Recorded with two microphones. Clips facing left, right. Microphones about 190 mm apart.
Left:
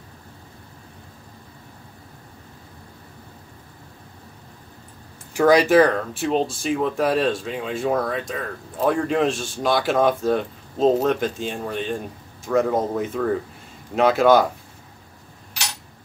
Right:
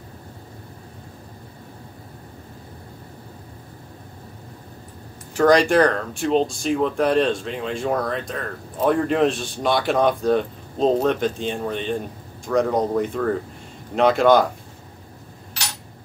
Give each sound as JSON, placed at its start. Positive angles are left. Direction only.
{"t": 5.3, "sound": "speech", "side_deg": 10}